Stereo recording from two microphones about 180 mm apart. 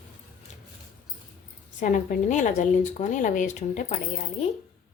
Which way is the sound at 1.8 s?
45° left (ahead or behind).